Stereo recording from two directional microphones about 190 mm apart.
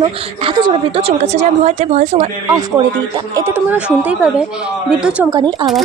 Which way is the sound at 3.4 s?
10° right (ahead or behind).